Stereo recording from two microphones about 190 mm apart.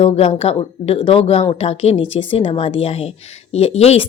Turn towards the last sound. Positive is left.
turn(degrees=30)  # may be behind; listen again after turning